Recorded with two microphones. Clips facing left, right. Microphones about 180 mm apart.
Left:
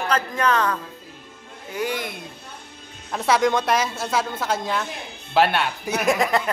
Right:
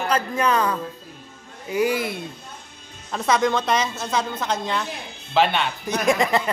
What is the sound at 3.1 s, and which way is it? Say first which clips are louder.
Speech: left 1 dB; 10° left (ahead or behind).